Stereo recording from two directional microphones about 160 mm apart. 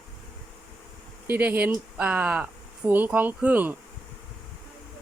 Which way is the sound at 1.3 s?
10° right (ahead or behind).